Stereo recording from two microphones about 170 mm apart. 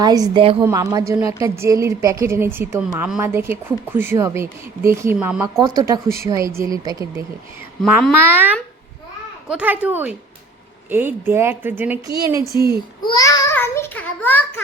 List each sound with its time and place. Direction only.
0.0 s a woman's voice: 25° right (ahead or behind)
8.1 s a woman's voice: 10° right (ahead or behind)
13.1 s a child's voice: 20° left (ahead or behind)